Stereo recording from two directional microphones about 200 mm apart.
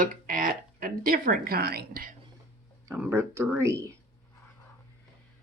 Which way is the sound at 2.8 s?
10° right (ahead or behind).